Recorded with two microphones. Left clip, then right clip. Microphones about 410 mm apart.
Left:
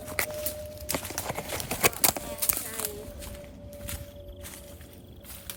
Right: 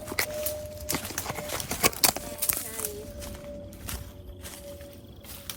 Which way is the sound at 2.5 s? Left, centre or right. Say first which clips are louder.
Even; centre.